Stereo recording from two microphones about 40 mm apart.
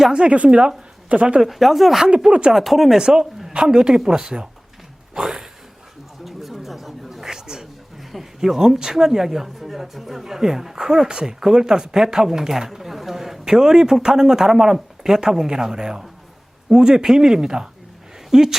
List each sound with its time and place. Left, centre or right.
0.3 s speech: right
1.4 s speech: centre
3.0 s speech: centre
6.2 s a sound: centre
8.1 s speech: centre